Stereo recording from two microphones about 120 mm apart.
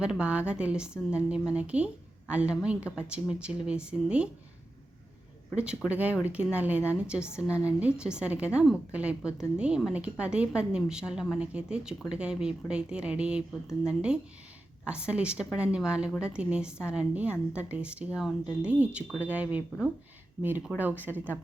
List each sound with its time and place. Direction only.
0.0 s a woman's voice: 10° right (ahead or behind)
5.5 s a woman's voice: 10° right (ahead or behind)